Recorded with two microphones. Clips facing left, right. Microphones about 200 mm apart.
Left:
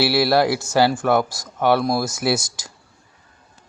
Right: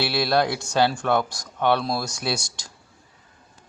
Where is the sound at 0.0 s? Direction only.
5° left (ahead or behind).